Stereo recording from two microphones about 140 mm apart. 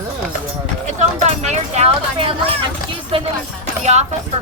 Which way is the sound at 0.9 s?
55° right (ahead or behind).